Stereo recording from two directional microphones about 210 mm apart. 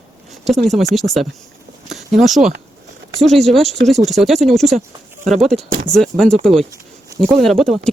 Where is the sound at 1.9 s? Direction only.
Centre (ahead or behind).